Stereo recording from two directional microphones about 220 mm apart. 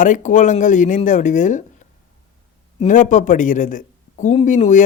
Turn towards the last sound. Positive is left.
turn(degrees=35)  # may be behind; listen again after turning